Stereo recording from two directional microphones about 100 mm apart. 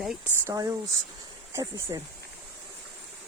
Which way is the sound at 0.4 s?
35° right (ahead or behind).